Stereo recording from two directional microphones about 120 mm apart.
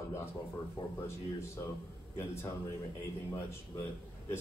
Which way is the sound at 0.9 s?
20° left (ahead or behind).